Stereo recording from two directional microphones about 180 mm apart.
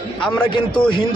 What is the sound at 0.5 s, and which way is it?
Speech, 25° left (ahead or behind).